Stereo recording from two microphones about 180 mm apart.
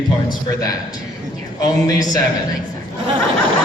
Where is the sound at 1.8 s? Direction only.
20° left (ahead or behind).